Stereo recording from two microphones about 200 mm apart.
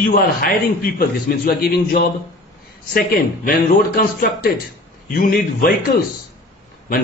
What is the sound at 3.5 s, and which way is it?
A man's voice, 50° left (ahead or behind).